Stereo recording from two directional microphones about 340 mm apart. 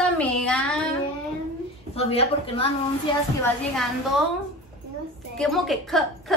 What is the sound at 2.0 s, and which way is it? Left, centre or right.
Speech, centre.